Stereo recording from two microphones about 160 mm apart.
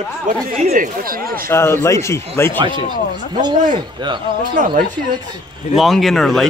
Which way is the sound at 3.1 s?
30° right (ahead or behind).